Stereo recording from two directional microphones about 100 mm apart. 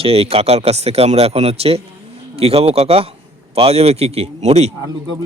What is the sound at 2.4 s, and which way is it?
Speech, 80° right.